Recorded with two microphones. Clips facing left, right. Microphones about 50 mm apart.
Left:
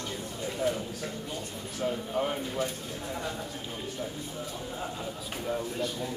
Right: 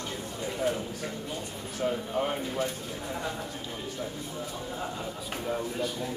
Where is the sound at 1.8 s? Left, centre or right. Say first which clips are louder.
Right 1 dB; centre.